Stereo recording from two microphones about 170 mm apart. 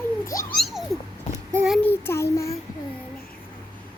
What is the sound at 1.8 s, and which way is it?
Child singing, 15° left (ahead or behind).